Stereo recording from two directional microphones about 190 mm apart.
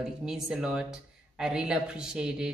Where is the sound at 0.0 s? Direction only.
5° right (ahead or behind).